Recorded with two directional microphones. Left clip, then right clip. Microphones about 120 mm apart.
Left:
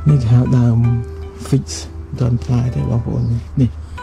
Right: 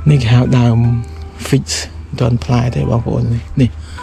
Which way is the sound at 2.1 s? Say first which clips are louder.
Right 5 dB; 20° left (ahead or behind).